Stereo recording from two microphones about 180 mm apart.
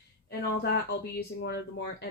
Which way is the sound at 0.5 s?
70° left (ahead or behind).